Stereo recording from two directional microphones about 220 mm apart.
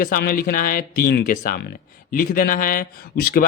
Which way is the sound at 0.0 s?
40° left (ahead or behind).